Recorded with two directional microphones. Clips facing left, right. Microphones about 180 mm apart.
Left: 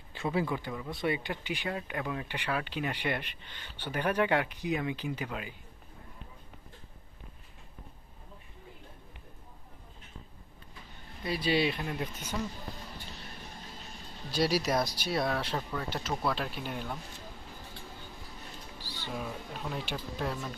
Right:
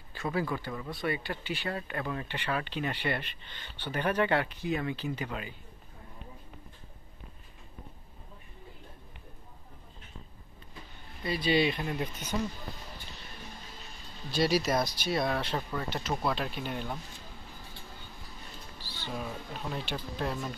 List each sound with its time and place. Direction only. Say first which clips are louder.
0.1 s speech: left 1 dB; 20° left (ahead or behind)
11.2 s speech: right 2 dB; 10° left (ahead or behind)
12.3 s speech: right 3 dB; 15° right (ahead or behind)
14.3 s speech: right 1 dB; 10° left (ahead or behind)
16.1 s speech: right 1 dB; 15° right (ahead or behind)
16.3 s speech: right 1 dB; 5° left (ahead or behind)
18.8 s music: even; 15° left (ahead or behind)
19.1 s speech: even; centre (ahead or behind)
20.2 s speech: right 2 dB; 5° right (ahead or behind)